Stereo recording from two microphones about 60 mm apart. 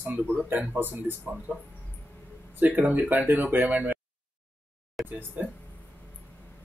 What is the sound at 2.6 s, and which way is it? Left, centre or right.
Speech, right.